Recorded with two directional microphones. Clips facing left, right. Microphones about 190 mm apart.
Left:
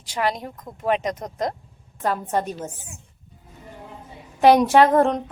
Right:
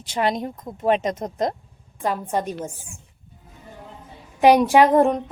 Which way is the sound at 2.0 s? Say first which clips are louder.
Even; 10° right (ahead or behind).